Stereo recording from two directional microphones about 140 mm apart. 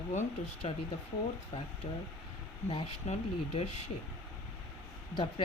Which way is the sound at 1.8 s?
55° left (ahead or behind).